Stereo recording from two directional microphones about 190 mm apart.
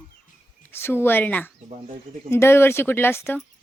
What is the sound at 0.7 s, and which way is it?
Speech, 10° left (ahead or behind).